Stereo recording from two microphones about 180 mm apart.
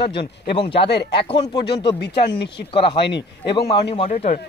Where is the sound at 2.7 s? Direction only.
30° left (ahead or behind).